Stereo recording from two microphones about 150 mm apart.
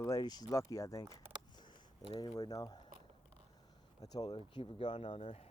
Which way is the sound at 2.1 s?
25° left (ahead or behind).